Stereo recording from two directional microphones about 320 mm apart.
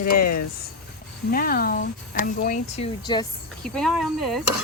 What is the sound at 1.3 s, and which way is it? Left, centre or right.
Speech, left.